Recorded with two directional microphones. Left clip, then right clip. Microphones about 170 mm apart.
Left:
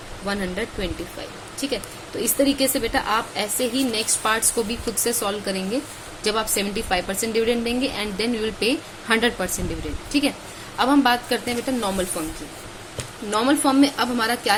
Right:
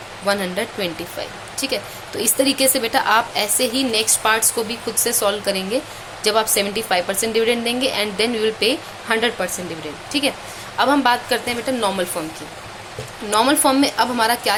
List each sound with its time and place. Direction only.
0.3 s a woman's voice: 20° right (ahead or behind)
13.3 s a woman's voice: 15° right (ahead or behind)